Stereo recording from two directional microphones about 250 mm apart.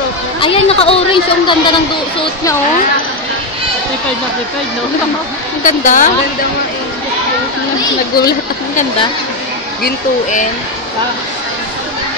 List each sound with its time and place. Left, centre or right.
0.4 s a woman's voice: left
5.6 s speech: left
8.2 s speech: left